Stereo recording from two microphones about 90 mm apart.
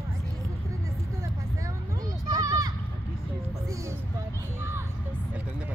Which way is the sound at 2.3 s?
40° right (ahead or behind).